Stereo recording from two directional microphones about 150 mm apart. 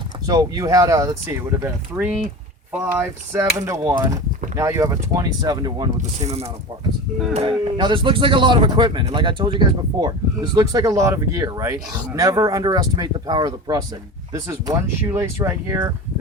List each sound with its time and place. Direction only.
0.3 s speech: 25° right (ahead or behind)
6.0 s speech: 45° right (ahead or behind)
7.8 s speech: 30° right (ahead or behind)